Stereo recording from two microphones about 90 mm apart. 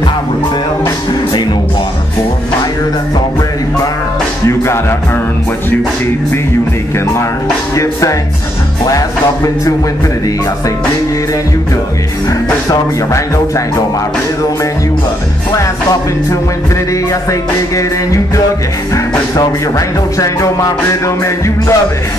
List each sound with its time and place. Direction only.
7.7 s music: 35° left (ahead or behind)
15.5 s music: 40° left (ahead or behind)
20.2 s music: 40° left (ahead or behind)